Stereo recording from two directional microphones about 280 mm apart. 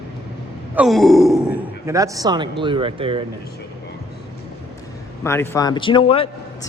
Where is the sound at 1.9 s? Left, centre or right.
Centre.